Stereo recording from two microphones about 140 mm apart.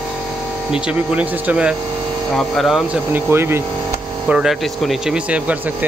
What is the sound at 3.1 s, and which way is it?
Speech, 15° right (ahead or behind).